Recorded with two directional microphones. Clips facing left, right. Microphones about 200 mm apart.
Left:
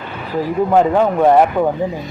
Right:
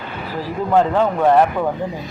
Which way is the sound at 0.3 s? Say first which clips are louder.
Left 3 dB; 15° left (ahead or behind).